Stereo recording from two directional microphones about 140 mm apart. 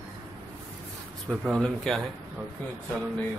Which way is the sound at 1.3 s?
Centre (ahead or behind).